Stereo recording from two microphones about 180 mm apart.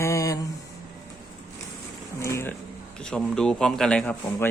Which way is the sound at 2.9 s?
5° left (ahead or behind).